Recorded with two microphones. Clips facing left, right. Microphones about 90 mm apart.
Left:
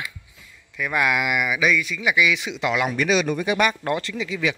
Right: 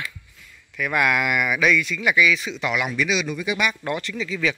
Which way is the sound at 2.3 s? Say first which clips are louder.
Even; 20° left (ahead or behind).